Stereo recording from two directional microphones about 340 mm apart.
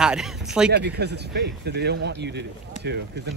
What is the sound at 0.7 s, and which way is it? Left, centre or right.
Speech, right.